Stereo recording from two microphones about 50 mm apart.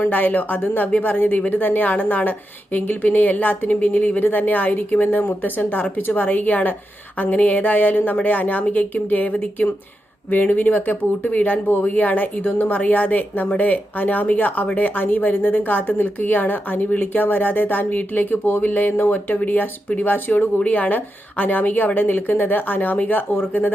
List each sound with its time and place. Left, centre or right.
0.0 s a woman's voice: left